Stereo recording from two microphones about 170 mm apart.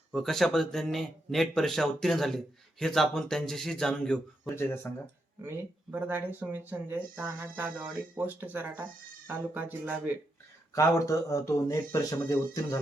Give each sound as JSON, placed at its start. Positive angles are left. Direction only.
{"t": 0.1, "sound": "speech", "side_deg": 0}
{"t": 5.4, "sound": "speech", "side_deg": -10}
{"t": 10.8, "sound": "speech", "side_deg": 20}